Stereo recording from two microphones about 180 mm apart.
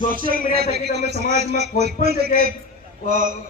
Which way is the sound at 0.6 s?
65° right (ahead or behind).